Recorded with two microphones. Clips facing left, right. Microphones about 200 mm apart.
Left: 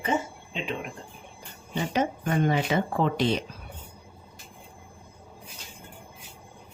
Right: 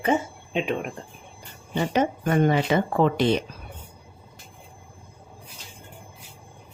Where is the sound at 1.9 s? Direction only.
60° right (ahead or behind).